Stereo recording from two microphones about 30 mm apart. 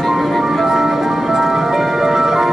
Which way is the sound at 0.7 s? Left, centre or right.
Centre.